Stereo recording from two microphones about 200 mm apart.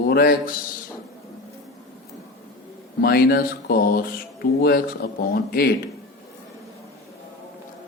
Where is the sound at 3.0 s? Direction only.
50° left (ahead or behind).